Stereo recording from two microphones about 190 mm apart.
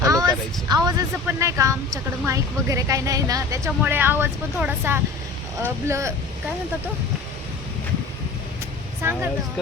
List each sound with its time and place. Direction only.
0.0 s a sound: 20° right (ahead or behind)
1.3 s speech: 15° right (ahead or behind)
9.0 s speech: 10° right (ahead or behind)